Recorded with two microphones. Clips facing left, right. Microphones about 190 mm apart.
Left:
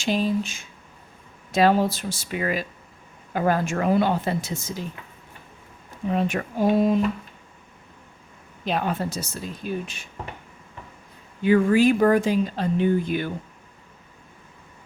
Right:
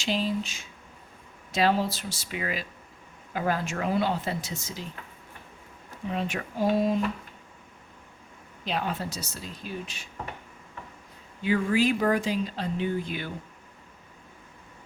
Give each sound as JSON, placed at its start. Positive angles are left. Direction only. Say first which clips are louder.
{"t": 0.0, "sound": "speech", "louder": "left 5 dB", "side_deg": 50}
{"t": 6.1, "sound": "speech", "louder": "left 7 dB", "side_deg": 50}
{"t": 8.6, "sound": "speech", "louder": "left 5 dB", "side_deg": 50}
{"t": 11.4, "sound": "speech", "louder": "left 7 dB", "side_deg": 50}